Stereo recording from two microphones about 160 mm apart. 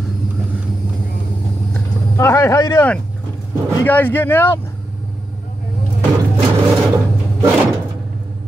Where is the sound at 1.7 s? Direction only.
15° left (ahead or behind).